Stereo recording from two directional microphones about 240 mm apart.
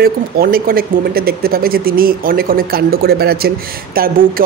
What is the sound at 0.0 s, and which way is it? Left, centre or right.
Speech, right.